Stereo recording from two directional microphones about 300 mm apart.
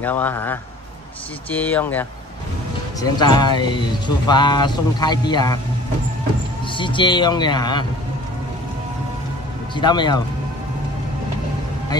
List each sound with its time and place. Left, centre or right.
0.0 s speech: centre
6.8 s speech: centre
9.8 s speech: centre